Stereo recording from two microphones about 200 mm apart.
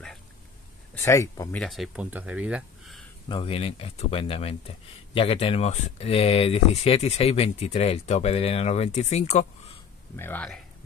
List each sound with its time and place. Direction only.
1.0 s speech: 15° left (ahead or behind)
1.5 s speech: centre (ahead or behind)
3.3 s speech: 30° left (ahead or behind)
10.1 s speech: 10° left (ahead or behind)